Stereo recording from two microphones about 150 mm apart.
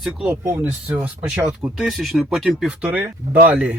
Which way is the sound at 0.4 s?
15° right (ahead or behind).